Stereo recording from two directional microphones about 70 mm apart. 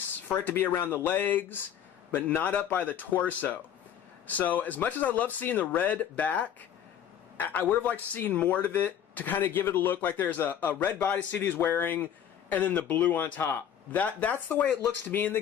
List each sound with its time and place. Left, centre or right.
0.4 s a man's voice: left